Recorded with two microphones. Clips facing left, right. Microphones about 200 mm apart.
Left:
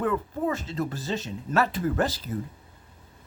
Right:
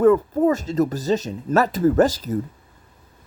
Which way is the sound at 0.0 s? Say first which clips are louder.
Right 11 dB; 40° right (ahead or behind).